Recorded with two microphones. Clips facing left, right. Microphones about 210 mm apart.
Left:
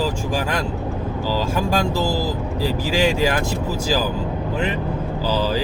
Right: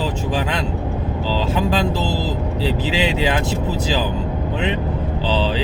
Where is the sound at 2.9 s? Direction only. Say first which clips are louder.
Left 5 dB; 45° left (ahead or behind).